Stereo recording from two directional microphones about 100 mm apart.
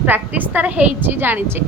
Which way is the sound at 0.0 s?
15° right (ahead or behind).